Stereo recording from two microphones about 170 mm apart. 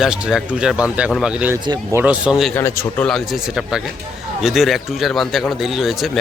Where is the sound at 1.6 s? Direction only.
25° right (ahead or behind).